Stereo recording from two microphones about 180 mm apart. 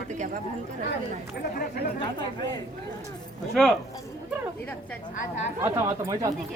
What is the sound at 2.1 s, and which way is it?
Speech, 25° left (ahead or behind).